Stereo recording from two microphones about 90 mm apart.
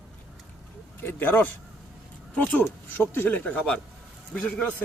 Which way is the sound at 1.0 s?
25° left (ahead or behind).